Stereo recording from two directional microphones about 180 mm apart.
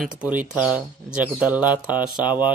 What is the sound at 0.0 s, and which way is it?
Speech, 5° right (ahead or behind).